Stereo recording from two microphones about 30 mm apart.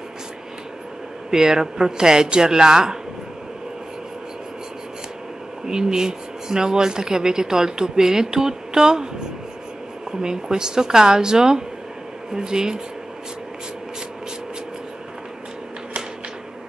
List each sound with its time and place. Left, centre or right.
1.3 s speech: centre
5.7 s speech: right
10.2 s speech: right